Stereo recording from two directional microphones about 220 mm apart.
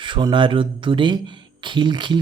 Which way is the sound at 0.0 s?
20° right (ahead or behind).